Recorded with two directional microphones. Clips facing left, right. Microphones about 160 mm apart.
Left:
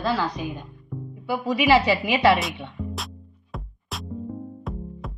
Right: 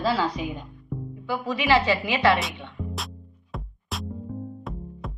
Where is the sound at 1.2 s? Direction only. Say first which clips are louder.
Left 5 dB; 15° left (ahead or behind).